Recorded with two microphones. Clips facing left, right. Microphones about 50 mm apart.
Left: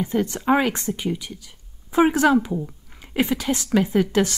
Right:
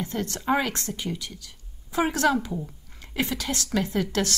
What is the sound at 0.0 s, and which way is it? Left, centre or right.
A woman's voice, centre.